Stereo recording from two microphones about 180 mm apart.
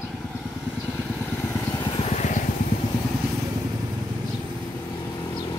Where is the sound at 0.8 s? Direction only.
10° left (ahead or behind); by 2.4 s 40° left (ahead or behind).